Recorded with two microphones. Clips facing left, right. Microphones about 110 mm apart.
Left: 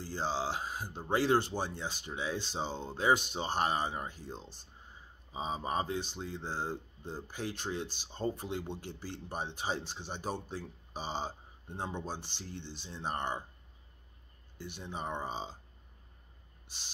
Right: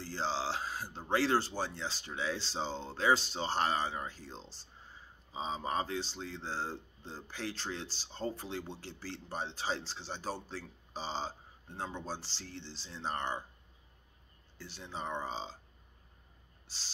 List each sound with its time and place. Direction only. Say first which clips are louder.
0.0 s a sound: left 1 dB; 15° left (ahead or behind)
0.9 s speech: left 2 dB; 15° left (ahead or behind)
12.6 s speech: left 3 dB; 55° left (ahead or behind)
12.9 s speech: left 1 dB; 15° left (ahead or behind)
14.8 s speech: even; 15° left (ahead or behind)